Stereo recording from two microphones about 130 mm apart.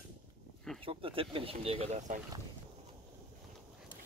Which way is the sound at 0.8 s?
45° right (ahead or behind).